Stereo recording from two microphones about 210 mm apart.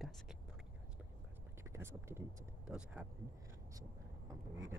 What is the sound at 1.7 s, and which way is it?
Speech, 10° right (ahead or behind).